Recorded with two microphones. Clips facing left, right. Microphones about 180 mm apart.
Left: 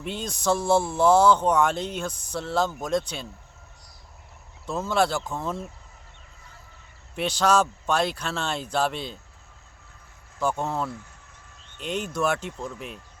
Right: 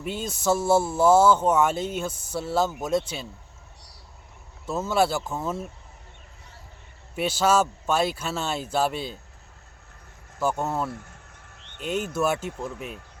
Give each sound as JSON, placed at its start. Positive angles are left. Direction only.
{"t": 0.0, "sound": "speech", "side_deg": -5}
{"t": 4.6, "sound": "speech", "side_deg": -5}
{"t": 7.2, "sound": "speech", "side_deg": -5}
{"t": 10.4, "sound": "speech", "side_deg": -5}
{"t": 11.5, "sound": "a sound", "side_deg": -65}
{"t": 12.1, "sound": "speech", "side_deg": -5}